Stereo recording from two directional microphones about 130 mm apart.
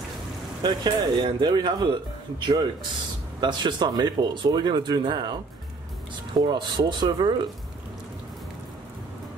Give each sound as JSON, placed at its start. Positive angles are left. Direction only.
{"t": 0.6, "sound": "speech", "side_deg": -30}
{"t": 6.3, "sound": "speech", "side_deg": -35}